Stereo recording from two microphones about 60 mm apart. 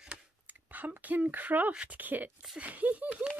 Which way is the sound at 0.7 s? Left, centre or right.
Right.